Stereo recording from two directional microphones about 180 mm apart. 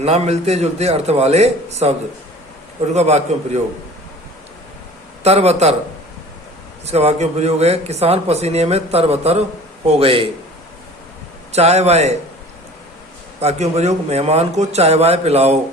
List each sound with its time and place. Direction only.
0.0 s speech: 35° right (ahead or behind)
2.9 s speech: 40° right (ahead or behind)
5.2 s speech: 35° right (ahead or behind)
6.8 s speech: 35° right (ahead or behind)
11.5 s speech: 35° right (ahead or behind)
13.4 s speech: 35° right (ahead or behind)